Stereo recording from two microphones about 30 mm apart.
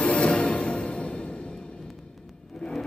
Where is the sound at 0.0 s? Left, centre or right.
Left.